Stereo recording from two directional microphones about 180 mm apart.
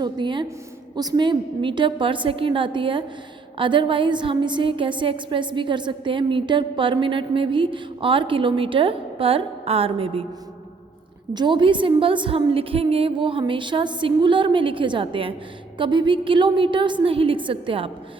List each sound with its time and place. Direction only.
0.0 s a woman's voice: 25° right (ahead or behind)
11.3 s a woman's voice: 25° right (ahead or behind)